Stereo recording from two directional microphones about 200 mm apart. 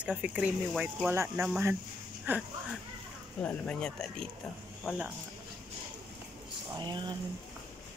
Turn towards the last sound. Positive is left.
turn(degrees=-20)  # may be behind; listen again after turning